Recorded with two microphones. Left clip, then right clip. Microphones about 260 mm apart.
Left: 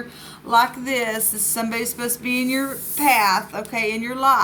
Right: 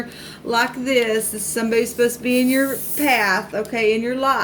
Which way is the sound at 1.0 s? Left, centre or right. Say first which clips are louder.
Right 4 dB; left.